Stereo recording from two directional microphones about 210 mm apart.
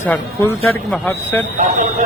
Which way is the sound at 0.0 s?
10° left (ahead or behind).